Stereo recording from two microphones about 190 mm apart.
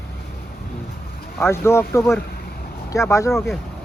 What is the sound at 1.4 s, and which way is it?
Speech, 15° left (ahead or behind).